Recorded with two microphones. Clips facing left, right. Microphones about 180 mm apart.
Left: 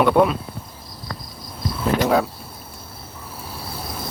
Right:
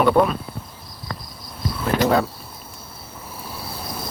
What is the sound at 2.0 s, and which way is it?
Speech, centre (ahead or behind).